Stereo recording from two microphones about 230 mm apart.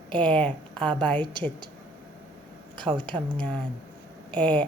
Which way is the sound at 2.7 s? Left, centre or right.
Right.